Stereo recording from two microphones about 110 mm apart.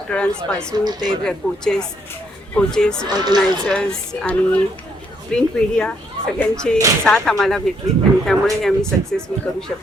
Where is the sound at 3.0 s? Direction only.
40° right (ahead or behind).